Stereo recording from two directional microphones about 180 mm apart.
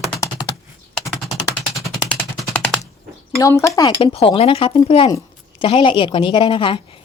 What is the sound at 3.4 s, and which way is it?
Speech, 15° left (ahead or behind).